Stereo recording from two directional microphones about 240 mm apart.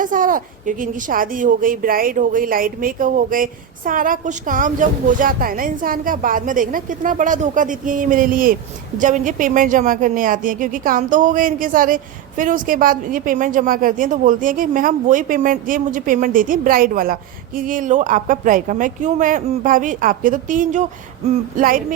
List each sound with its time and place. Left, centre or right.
0.0 s a woman's voice: right